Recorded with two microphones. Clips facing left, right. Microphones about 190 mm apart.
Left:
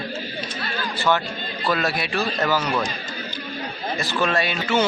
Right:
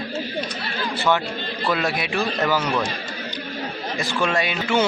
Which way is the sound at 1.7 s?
15° right (ahead or behind).